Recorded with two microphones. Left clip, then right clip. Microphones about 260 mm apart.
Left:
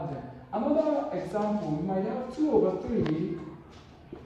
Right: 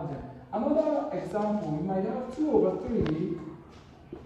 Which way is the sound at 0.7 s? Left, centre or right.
Left.